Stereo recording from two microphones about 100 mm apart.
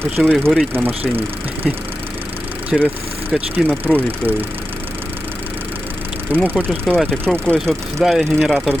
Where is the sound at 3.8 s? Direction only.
20° right (ahead or behind).